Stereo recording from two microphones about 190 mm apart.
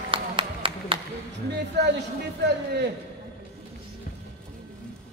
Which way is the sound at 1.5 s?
65° right (ahead or behind).